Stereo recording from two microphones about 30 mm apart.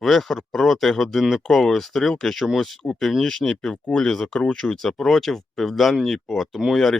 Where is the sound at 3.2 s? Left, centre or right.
Left.